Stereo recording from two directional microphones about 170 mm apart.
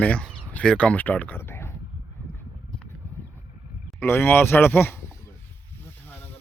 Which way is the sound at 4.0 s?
15° left (ahead or behind).